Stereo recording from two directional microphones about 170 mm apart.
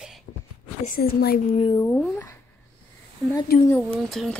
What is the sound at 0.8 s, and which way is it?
Speech, 60° left (ahead or behind).